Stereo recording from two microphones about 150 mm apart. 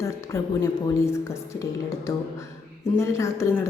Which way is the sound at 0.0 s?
20° left (ahead or behind).